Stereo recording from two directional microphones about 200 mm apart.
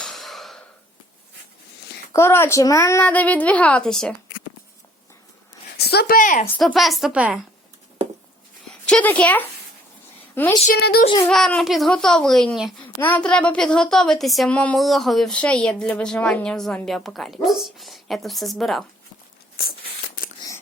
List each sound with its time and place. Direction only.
0.0 s a sound: centre (ahead or behind)
2.1 s a woman's voice: 10° left (ahead or behind)
5.7 s speech: 55° left (ahead or behind)
6.6 s a woman's voice: centre (ahead or behind)
8.9 s a woman's voice: 5° left (ahead or behind)
10.7 s a child's voice: 50° left (ahead or behind)
11.0 s a sound: 20° left (ahead or behind)
11.3 s a woman's voice: 5° left (ahead or behind)
19.6 s a sound: 45° left (ahead or behind)